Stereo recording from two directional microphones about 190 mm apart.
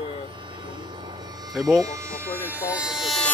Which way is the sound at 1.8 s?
15° right (ahead or behind).